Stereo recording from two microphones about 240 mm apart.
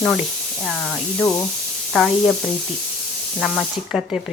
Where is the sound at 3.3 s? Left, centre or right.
Centre.